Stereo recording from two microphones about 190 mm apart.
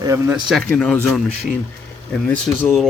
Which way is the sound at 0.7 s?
5° left (ahead or behind).